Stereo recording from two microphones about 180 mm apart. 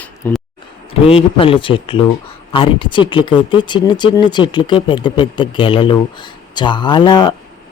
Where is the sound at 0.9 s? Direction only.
30° left (ahead or behind).